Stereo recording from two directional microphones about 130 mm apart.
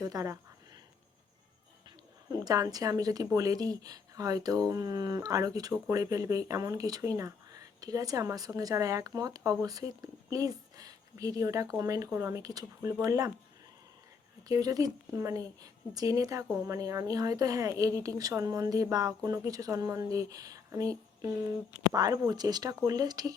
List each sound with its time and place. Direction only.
0.0 s speech: 30° right (ahead or behind)
2.3 s speech: 30° right (ahead or behind)
14.4 s speech: 30° right (ahead or behind)